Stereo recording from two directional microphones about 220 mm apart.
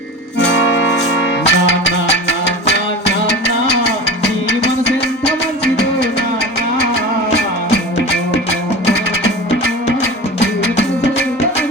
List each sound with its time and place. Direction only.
0.3 s music: 55° left (ahead or behind)